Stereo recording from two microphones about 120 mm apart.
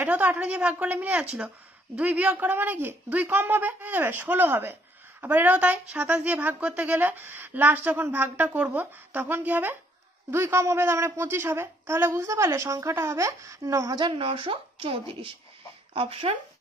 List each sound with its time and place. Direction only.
0.0 s a woman's voice: 15° right (ahead or behind)
13.9 s a woman's voice: 45° right (ahead or behind)